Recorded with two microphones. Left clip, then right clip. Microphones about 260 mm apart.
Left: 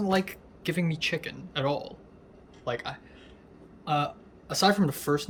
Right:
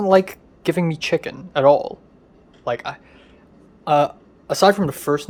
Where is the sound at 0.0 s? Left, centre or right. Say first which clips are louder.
Right 13 dB; centre.